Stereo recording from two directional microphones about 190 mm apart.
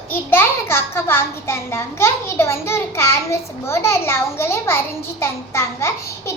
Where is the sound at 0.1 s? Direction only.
10° left (ahead or behind).